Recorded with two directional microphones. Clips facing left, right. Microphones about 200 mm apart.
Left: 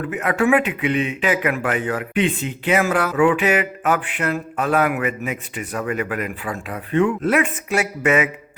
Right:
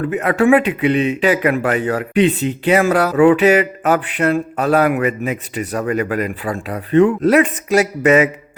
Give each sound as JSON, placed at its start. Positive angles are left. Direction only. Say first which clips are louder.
{"t": 0.1, "sound": "speech", "louder": "right 5 dB", "side_deg": -35}